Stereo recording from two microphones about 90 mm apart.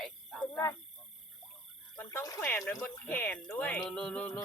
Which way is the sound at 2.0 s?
25° left (ahead or behind).